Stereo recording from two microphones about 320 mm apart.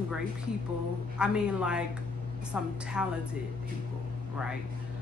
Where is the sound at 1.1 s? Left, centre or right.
Centre.